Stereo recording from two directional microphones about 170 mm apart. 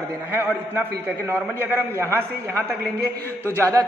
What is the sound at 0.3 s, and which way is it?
A man's voice, 10° right (ahead or behind).